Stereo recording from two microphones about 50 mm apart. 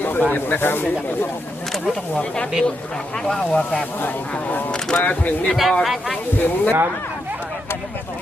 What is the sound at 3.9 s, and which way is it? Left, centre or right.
Speech, left.